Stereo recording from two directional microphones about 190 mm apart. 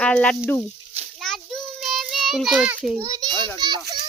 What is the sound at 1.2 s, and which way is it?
Child singing, centre (ahead or behind).